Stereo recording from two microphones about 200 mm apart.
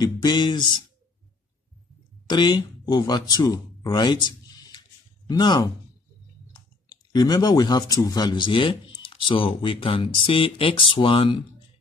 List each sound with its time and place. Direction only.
0.0 s speech: 20° left (ahead or behind)
2.2 s speech: 20° left (ahead or behind)